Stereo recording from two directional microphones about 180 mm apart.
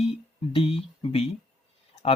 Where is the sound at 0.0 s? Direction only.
30° left (ahead or behind).